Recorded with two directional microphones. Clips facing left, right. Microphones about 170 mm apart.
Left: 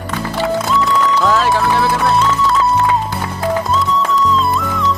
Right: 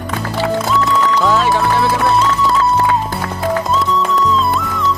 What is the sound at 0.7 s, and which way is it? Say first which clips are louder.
Music: even; centre (ahead or behind).